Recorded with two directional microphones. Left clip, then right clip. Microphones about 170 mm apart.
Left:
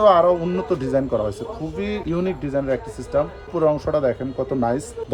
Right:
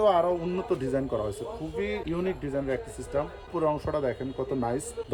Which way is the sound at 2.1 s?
60° left (ahead or behind).